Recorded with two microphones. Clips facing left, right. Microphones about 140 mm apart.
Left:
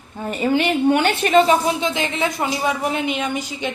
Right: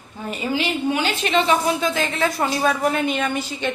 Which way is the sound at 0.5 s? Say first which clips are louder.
Left 5 dB; 60° left (ahead or behind).